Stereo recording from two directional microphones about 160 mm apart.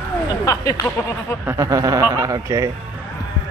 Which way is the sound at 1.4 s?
20° right (ahead or behind).